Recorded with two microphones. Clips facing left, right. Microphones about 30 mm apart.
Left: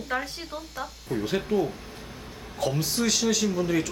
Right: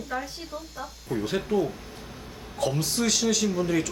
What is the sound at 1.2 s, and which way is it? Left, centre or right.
A man's voice, centre.